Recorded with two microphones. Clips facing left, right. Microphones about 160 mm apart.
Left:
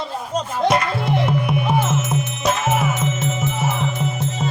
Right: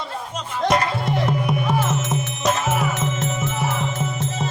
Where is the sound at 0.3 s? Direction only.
40° left (ahead or behind).